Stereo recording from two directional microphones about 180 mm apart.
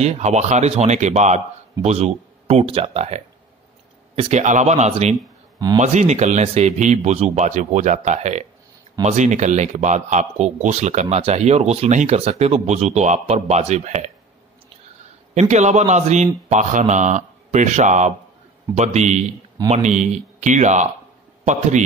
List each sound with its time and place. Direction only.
0.0 s speech: 40° right (ahead or behind)
15.3 s speech: 40° right (ahead or behind)